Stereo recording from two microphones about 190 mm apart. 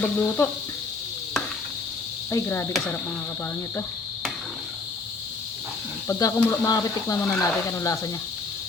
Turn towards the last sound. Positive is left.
turn(degrees=15)  # may be behind; listen again after turning